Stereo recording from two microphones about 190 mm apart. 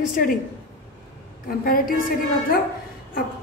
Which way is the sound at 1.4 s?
50° left (ahead or behind).